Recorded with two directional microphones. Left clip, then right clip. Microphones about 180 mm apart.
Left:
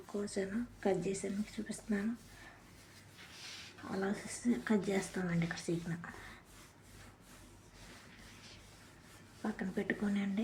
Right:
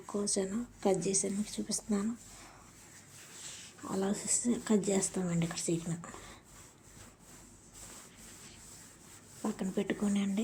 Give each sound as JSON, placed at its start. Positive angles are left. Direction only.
{"t": 0.1, "sound": "speech", "side_deg": -20}
{"t": 3.9, "sound": "speech", "side_deg": -20}
{"t": 9.4, "sound": "speech", "side_deg": -25}